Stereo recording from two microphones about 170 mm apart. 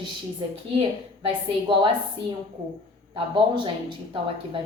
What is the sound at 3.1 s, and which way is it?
Speech, 30° right (ahead or behind).